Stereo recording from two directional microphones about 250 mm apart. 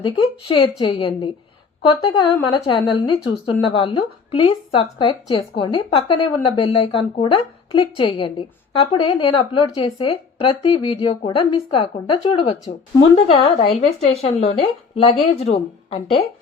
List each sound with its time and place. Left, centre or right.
0.0 s a woman's voice: centre